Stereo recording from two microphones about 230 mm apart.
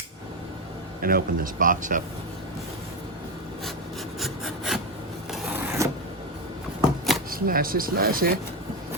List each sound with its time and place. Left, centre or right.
1.0 s speech: right
4.2 s rub: centre
5.3 s a sound: centre
7.3 s speech: right